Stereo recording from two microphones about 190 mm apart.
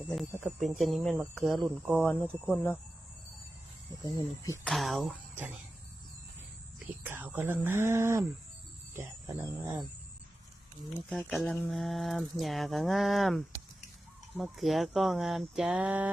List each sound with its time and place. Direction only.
0.1 s speech: centre (ahead or behind)
4.2 s speech: 10° left (ahead or behind)
4.7 s speech: centre (ahead or behind)
7.0 s speech: 10° right (ahead or behind)
11.1 s speech: 5° left (ahead or behind)